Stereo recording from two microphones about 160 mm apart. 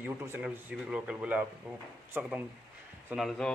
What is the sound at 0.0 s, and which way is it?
Speech, 10° right (ahead or behind).